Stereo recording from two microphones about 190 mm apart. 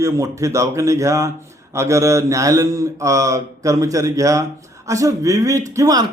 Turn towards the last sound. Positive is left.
turn(degrees=-20)  # may be behind; listen again after turning